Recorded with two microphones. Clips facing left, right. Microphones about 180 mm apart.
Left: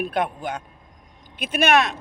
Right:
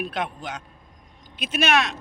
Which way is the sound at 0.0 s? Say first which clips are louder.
Left 5 dB; 55° left (ahead or behind).